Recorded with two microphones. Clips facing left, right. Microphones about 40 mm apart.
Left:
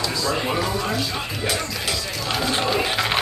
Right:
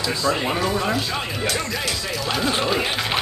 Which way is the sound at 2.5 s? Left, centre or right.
Centre.